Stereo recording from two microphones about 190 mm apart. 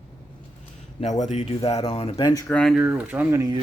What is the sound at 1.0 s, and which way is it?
Speech, 40° left (ahead or behind).